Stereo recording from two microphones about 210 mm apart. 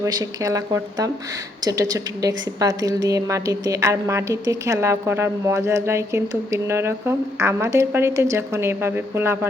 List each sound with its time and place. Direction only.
0.0 s a woman's voice: 15° right (ahead or behind)